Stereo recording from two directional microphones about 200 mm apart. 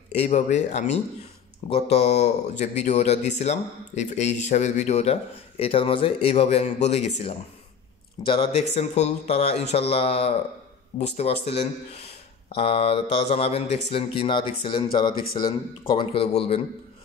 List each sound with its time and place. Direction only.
0.1 s speech: 35° left (ahead or behind)